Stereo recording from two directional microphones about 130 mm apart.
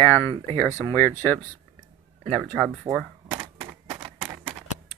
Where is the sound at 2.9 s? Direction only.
25° right (ahead or behind).